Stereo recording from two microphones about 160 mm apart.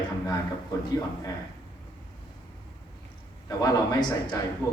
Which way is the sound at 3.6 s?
25° left (ahead or behind).